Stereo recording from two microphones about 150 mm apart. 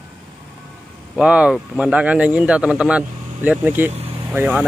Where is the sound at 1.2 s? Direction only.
5° right (ahead or behind).